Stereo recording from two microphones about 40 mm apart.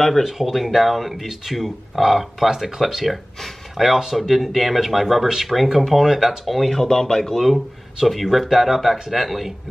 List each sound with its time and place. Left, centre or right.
0.2 s speech: centre
6.8 s speech: centre
7.3 s speech: centre